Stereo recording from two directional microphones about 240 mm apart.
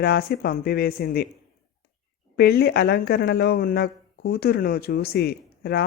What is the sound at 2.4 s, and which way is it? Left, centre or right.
Speech, left.